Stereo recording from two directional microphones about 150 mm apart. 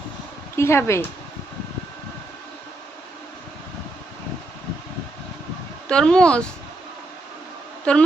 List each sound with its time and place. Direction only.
0.5 s speech: 15° left (ahead or behind)
5.9 s speech: 5° left (ahead or behind)
7.9 s speech: 5° left (ahead or behind)